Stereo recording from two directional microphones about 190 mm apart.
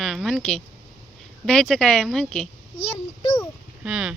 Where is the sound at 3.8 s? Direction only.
5° right (ahead or behind).